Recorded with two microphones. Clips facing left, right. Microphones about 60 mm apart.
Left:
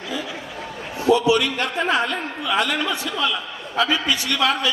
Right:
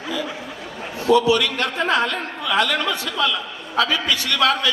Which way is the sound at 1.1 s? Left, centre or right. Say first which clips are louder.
Right 1 dB; left.